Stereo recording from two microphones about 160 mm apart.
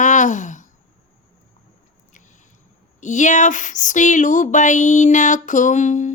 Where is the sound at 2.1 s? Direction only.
50° left (ahead or behind).